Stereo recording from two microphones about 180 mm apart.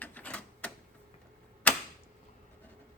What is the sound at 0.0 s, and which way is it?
Typewriter, 10° left (ahead or behind).